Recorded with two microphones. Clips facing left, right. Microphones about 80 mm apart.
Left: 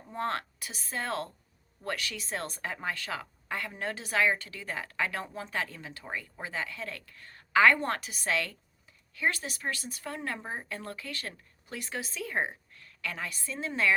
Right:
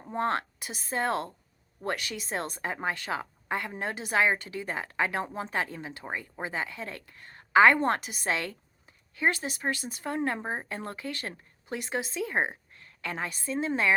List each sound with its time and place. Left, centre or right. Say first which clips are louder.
0.1 s a woman's voice: right 4 dB; right